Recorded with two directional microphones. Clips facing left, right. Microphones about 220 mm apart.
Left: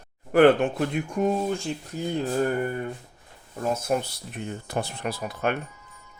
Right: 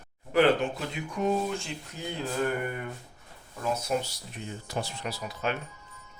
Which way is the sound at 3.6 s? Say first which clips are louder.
Left 4 dB; 50° left (ahead or behind).